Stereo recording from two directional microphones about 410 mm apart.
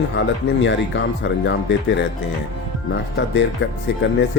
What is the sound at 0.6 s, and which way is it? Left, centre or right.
Speech, left.